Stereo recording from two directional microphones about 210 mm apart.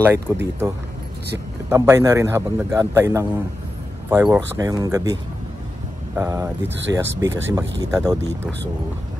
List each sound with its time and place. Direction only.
0.0 s a man's voice: 10° right (ahead or behind)